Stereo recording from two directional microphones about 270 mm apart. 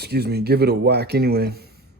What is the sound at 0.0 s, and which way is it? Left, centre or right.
Speech, right.